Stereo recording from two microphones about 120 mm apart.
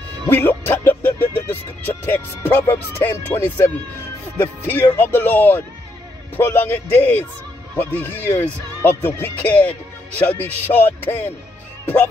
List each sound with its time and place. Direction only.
0.3 s speech: 15° left (ahead or behind)